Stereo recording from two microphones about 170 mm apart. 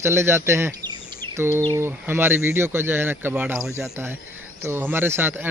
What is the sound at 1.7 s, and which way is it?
Speech, 15° right (ahead or behind).